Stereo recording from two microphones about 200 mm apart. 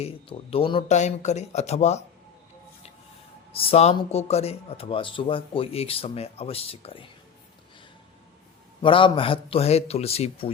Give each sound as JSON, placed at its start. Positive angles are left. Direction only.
{"t": 0.0, "sound": "speech", "side_deg": 30}
{"t": 3.5, "sound": "speech", "side_deg": 30}
{"t": 8.8, "sound": "speech", "side_deg": 25}